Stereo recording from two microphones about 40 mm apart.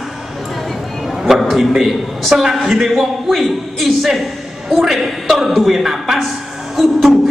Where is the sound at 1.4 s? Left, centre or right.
Centre.